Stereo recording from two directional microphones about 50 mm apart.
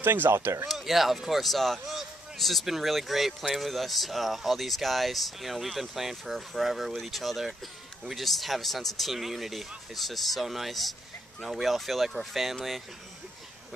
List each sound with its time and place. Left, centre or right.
0.0 s speech: right
0.7 s speech: centre